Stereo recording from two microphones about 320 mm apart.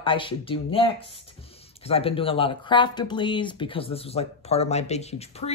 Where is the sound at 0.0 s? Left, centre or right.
Centre.